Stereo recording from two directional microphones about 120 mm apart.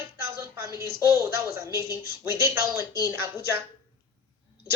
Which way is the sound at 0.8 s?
25° right (ahead or behind).